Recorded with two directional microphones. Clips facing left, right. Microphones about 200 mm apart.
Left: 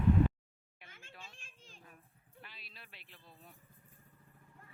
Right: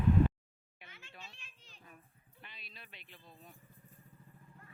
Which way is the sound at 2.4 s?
5° left (ahead or behind).